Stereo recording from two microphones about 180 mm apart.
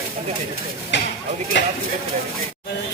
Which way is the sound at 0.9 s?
75° left (ahead or behind).